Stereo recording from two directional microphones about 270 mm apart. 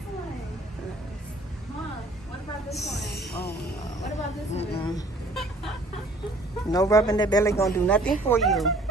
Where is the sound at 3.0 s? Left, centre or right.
Left.